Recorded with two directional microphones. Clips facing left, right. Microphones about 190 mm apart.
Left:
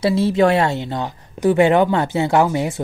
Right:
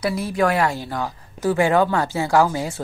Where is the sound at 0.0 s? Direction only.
25° left (ahead or behind).